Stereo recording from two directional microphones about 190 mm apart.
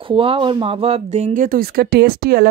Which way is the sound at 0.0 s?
30° right (ahead or behind).